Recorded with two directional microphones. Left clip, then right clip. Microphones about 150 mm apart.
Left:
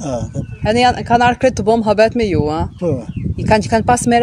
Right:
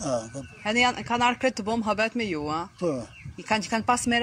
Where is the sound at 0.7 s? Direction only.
90° left.